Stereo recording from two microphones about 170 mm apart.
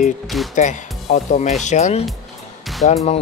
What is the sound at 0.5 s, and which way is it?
Speech, 45° left (ahead or behind).